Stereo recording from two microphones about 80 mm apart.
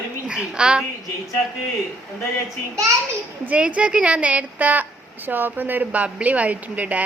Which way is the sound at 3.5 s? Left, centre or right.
Centre.